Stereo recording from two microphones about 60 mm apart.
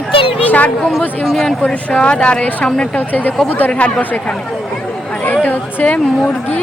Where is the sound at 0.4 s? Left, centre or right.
Left.